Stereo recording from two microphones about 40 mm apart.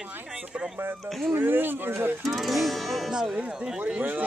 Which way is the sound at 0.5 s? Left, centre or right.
Right.